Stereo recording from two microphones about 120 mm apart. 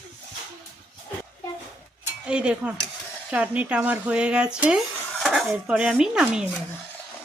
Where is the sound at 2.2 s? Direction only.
10° right (ahead or behind).